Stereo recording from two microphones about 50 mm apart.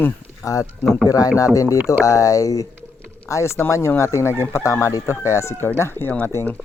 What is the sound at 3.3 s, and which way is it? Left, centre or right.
Speech, left.